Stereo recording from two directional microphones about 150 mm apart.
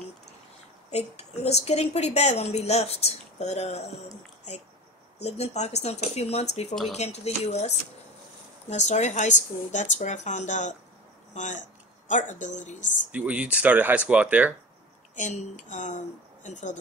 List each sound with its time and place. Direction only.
0.9 s a woman's voice: 45° left (ahead or behind)
5.2 s a woman's voice: 45° left (ahead or behind)
13.1 s speech: 10° right (ahead or behind)
15.1 s a woman's voice: 55° left (ahead or behind)